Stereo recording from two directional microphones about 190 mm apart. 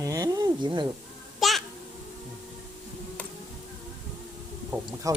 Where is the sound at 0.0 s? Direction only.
20° right (ahead or behind).